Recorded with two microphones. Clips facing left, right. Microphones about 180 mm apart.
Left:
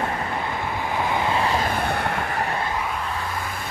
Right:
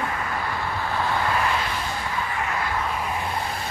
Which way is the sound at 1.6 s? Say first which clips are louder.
Left 5 dB; 55° left (ahead or behind).